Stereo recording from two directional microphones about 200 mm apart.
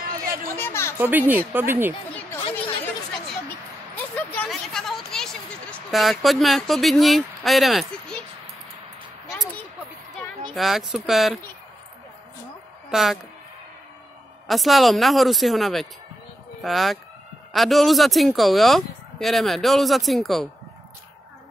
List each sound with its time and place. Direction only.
0.0 s a sound: 45° right (ahead or behind)
0.6 s a woman's voice: 10° left (ahead or behind)
0.9 s speech: 10° right (ahead or behind)
3.4 s speech: 10° left (ahead or behind)
10.5 s speech: centre (ahead or behind)
12.9 s speech: centre (ahead or behind)
14.5 s speech: centre (ahead or behind)